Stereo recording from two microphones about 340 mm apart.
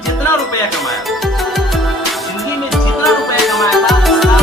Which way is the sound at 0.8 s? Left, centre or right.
Centre.